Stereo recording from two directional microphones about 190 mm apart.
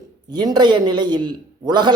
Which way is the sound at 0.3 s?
20° right (ahead or behind).